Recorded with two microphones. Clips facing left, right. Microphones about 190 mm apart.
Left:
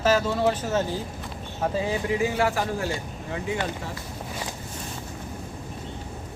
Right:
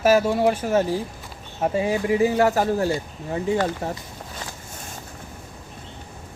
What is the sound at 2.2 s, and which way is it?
Speech, 40° right (ahead or behind).